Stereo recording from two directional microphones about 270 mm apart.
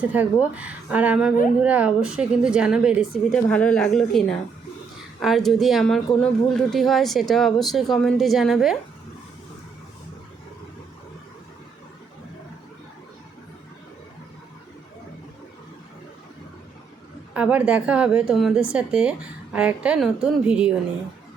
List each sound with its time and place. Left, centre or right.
0.0 s speech: centre
17.3 s speech: centre